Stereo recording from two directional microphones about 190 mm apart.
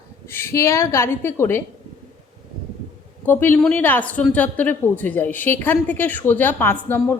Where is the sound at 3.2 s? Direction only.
10° left (ahead or behind).